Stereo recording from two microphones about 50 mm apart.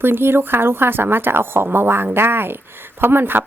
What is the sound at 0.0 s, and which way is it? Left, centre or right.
A woman's voice, right.